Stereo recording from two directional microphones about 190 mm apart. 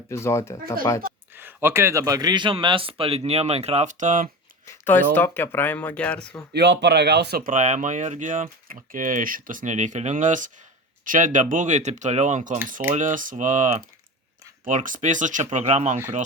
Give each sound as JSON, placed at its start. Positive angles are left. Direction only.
{"t": 0.1, "sound": "speech", "side_deg": 15}
{"t": 1.3, "sound": "speech", "side_deg": -10}
{"t": 4.6, "sound": "speech", "side_deg": 15}
{"t": 6.5, "sound": "speech", "side_deg": -60}